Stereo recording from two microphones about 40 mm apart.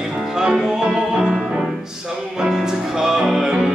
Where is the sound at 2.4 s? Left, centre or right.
Centre.